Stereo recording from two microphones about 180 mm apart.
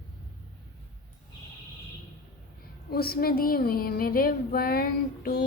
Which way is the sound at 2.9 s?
60° left (ahead or behind).